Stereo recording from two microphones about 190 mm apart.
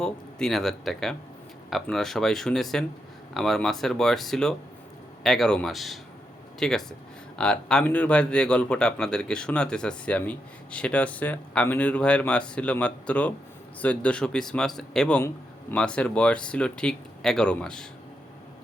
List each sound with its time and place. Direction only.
0.0 s speech: 5° left (ahead or behind)